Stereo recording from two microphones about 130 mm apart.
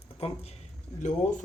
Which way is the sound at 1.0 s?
75° left (ahead or behind).